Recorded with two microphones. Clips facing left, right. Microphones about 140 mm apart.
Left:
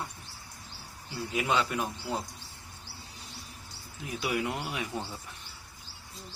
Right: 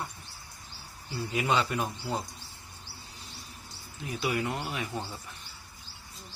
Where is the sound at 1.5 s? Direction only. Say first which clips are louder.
Right 1 dB; centre (ahead or behind).